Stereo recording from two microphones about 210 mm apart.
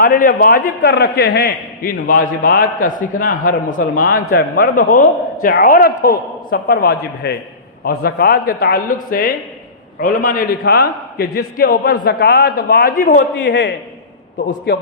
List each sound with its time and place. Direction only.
0.0 s a man's voice: 45° left (ahead or behind)
13.4 s a man's voice: 60° left (ahead or behind)